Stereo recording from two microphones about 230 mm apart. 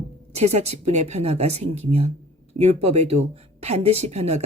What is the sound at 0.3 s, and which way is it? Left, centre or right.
Speech, right.